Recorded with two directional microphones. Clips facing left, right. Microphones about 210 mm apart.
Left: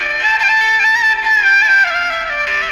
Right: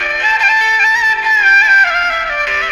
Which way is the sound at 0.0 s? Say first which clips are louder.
Right 3 dB; 55° right (ahead or behind).